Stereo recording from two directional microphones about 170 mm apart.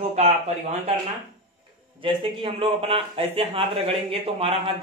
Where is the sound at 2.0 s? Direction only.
30° right (ahead or behind).